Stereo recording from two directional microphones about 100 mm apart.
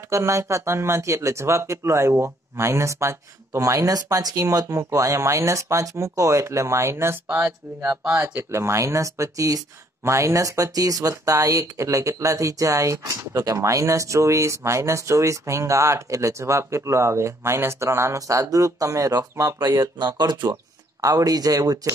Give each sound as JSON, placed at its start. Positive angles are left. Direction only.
{"t": 0.1, "sound": "speech", "side_deg": -30}